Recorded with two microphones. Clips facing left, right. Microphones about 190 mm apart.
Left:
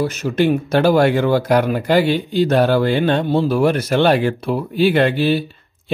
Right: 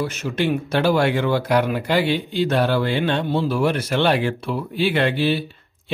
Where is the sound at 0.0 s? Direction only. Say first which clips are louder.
Left 5 dB; 40° left (ahead or behind).